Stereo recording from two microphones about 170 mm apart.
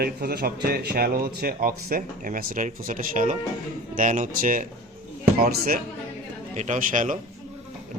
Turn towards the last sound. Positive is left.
turn(degrees=-50)  # may be behind; listen again after turning